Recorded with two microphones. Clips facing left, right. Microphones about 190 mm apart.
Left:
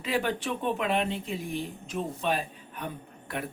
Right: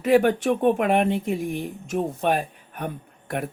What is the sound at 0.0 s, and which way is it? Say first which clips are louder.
Speech: right 11 dB; 50° right (ahead or behind).